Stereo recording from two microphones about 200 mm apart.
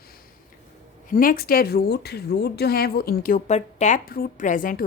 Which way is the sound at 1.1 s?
45° left (ahead or behind).